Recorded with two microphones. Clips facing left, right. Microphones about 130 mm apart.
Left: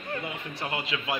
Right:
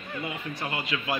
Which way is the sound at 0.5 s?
25° left (ahead or behind).